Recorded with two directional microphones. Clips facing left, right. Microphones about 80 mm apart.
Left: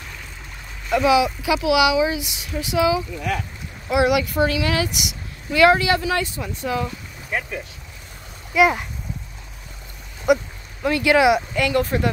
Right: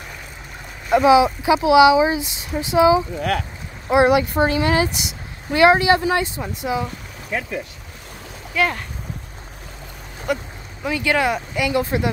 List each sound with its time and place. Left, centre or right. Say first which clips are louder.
0.8 s speech: right 4 dB; right
3.2 s speech: right 3 dB; right
3.9 s speech: right 3 dB; right
8.5 s speech: left 4 dB; centre
10.3 s speech: left 6 dB; centre
10.8 s speech: left 3 dB; centre
11.5 s a woman's voice: even; centre